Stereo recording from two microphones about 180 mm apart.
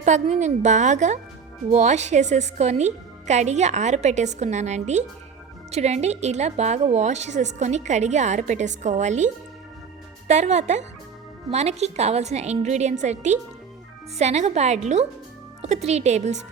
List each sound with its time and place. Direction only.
0.0 s a woman's voice: 40° right (ahead or behind)